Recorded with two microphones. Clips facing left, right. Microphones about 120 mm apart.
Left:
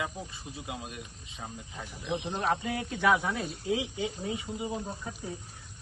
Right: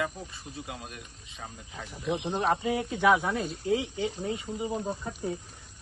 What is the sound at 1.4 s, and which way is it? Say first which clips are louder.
Speech: even; 5° left (ahead or behind).